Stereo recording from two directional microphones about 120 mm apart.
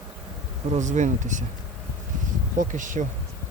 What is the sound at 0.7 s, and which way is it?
Speech, 90° right.